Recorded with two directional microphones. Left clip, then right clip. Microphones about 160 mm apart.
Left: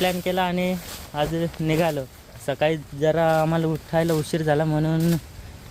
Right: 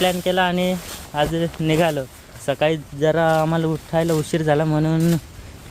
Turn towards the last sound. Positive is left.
turn(degrees=-15)  # may be behind; listen again after turning